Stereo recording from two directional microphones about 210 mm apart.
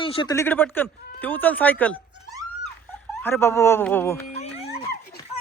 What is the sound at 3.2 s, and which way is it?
Speech, 10° left (ahead or behind).